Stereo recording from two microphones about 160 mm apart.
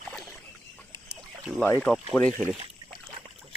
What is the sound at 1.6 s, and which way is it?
Speech, 10° left (ahead or behind).